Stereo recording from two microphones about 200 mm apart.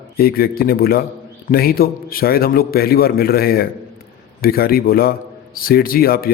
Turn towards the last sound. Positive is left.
turn(degrees=50)  # may be behind; listen again after turning